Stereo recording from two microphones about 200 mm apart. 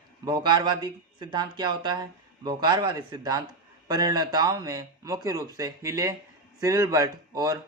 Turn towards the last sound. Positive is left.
turn(degrees=-15)  # may be behind; listen again after turning